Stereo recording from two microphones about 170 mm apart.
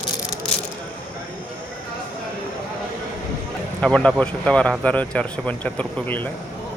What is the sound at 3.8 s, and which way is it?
Speech, 5° left (ahead or behind).